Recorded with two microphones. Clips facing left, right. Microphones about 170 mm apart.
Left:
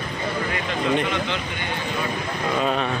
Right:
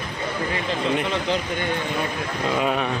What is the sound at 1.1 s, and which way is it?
Speech, 35° right (ahead or behind).